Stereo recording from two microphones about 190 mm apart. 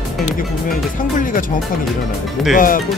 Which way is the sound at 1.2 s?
45° left (ahead or behind).